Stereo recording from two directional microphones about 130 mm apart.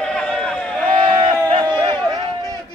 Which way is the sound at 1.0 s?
40° right (ahead or behind).